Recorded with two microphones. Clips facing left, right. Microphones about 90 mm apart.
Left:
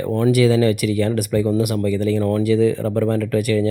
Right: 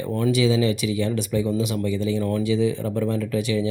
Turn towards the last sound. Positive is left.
turn(degrees=60)  # may be behind; listen again after turning